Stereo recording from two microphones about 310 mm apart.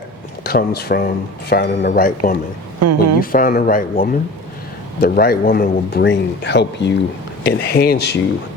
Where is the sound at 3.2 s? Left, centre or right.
Left.